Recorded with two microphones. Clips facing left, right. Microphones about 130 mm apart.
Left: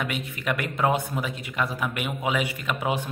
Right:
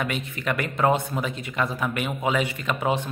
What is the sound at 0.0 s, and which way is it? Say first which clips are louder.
A man's voice: right 2 dB; 5° left (ahead or behind).